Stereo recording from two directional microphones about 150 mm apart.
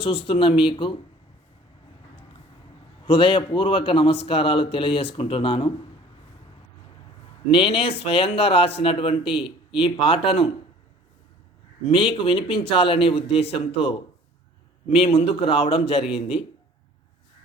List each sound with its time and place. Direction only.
0.0 s speech: 40° left (ahead or behind)
3.1 s speech: 35° left (ahead or behind)
7.5 s speech: 35° left (ahead or behind)
11.9 s speech: 35° left (ahead or behind)